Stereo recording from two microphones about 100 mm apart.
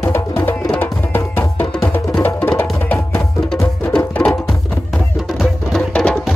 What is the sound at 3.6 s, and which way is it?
Music, 15° left (ahead or behind).